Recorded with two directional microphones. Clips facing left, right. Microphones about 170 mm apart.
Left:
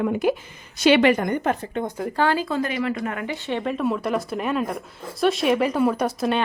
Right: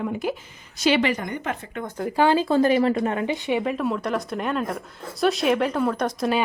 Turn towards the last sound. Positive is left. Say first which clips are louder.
# left 1 dB
turn(degrees=5)  # may be behind; listen again after turning